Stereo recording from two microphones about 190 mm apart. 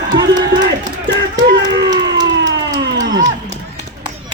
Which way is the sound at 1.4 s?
70° right (ahead or behind).